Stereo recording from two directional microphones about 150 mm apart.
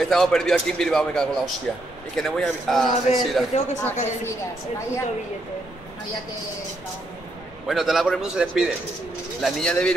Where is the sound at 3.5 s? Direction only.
45° left (ahead or behind).